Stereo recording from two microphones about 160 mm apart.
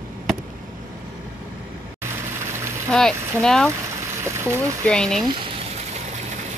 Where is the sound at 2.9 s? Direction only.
5° left (ahead or behind).